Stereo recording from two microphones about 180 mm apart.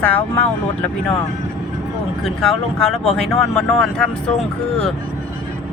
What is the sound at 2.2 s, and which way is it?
Speech, centre (ahead or behind).